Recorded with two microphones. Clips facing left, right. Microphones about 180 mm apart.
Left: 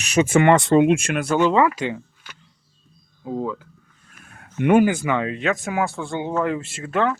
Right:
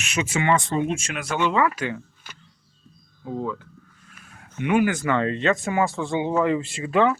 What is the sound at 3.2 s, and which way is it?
Speech, 15° left (ahead or behind).